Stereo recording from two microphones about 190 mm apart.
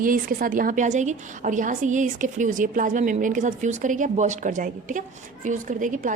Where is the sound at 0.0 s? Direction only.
45° right (ahead or behind).